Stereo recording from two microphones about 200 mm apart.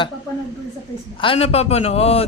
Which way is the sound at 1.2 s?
30° left (ahead or behind).